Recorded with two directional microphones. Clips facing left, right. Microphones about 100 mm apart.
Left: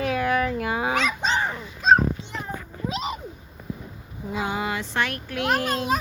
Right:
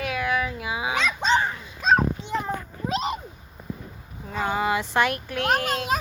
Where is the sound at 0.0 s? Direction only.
35° left (ahead or behind).